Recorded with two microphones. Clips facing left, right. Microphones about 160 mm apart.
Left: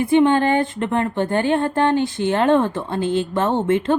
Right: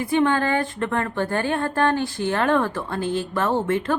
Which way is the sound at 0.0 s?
20° left (ahead or behind).